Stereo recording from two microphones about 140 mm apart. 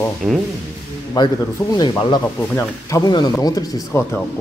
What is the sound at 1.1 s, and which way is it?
Speech, 30° left (ahead or behind).